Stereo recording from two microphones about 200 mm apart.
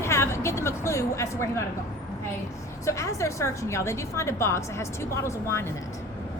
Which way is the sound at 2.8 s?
15° left (ahead or behind).